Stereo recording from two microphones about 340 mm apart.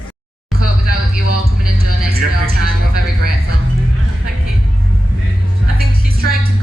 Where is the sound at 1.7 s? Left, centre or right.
Centre.